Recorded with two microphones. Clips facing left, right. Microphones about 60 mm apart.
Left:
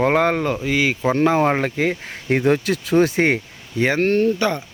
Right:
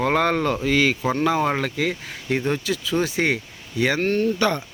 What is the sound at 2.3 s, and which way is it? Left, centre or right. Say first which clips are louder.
Speech: left 5 dB; left.